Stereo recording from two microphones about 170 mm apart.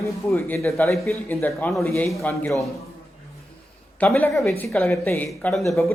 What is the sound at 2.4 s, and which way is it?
Speech, centre (ahead or behind).